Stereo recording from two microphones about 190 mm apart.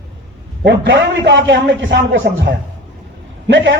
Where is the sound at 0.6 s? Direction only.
70° right (ahead or behind).